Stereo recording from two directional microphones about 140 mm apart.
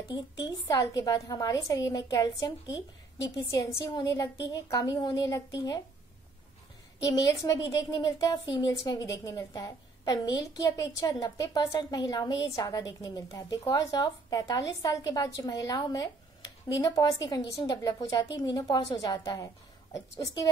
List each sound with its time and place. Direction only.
0.7 s a woman's voice: 25° left (ahead or behind)
7.1 s a woman's voice: 25° left (ahead or behind)